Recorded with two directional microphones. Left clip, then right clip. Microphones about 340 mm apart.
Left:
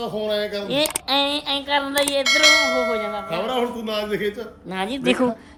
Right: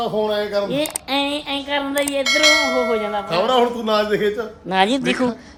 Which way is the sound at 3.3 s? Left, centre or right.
Centre.